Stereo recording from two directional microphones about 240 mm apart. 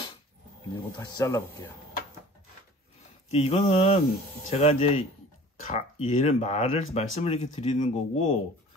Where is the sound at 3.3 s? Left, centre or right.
Left.